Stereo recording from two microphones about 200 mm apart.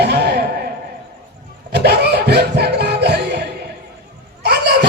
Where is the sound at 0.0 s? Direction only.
55° right (ahead or behind).